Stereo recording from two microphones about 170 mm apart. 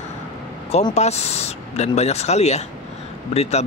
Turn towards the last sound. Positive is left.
turn(degrees=40)  # may be behind; listen again after turning